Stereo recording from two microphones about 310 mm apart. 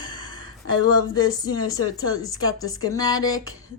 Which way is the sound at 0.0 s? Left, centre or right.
Centre.